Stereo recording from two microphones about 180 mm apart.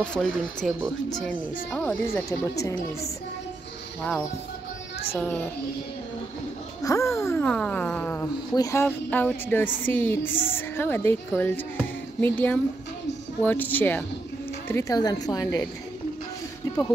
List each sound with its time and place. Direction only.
0.0 s a woman's voice: 5° left (ahead or behind)
2.2 s a woman's voice: 20° left (ahead or behind)
5.1 s a woman's voice: 10° left (ahead or behind)
6.8 s a woman's voice: 15° left (ahead or behind)